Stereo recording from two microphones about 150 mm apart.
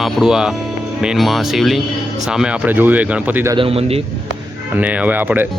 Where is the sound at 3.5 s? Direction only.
40° right (ahead or behind).